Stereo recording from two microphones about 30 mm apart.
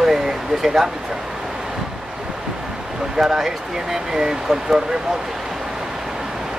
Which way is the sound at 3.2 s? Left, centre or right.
Centre.